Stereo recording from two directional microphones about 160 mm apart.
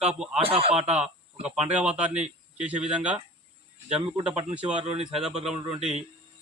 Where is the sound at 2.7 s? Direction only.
5° right (ahead or behind).